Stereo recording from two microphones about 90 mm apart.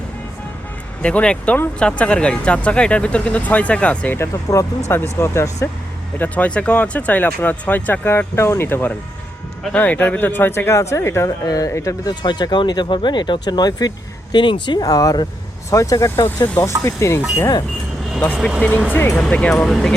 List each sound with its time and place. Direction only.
1.0 s speech: 10° left (ahead or behind)
4.5 s speech: 40° left (ahead or behind)
4.9 s speech: 25° left (ahead or behind)
6.1 s speech: 15° left (ahead or behind); by 12.1 s 35° left (ahead or behind)
12.2 s speech: 55° left (ahead or behind)
14.3 s speech: 65° left (ahead or behind)
14.8 s speech: 45° left (ahead or behind)
18.9 s speech: 20° left (ahead or behind)
19.2 s speech: 10° left (ahead or behind)